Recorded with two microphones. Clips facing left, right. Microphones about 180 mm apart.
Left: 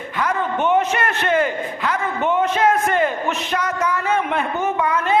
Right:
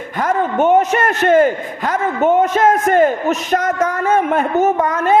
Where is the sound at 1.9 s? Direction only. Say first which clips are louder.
Right 7 dB; 45° right (ahead or behind).